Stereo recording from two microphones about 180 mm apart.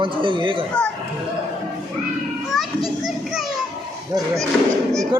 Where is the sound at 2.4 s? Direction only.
Centre (ahead or behind).